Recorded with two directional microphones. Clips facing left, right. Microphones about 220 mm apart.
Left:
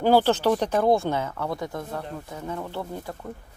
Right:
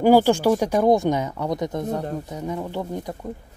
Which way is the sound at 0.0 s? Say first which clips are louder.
Right 4 dB; 10° right (ahead or behind).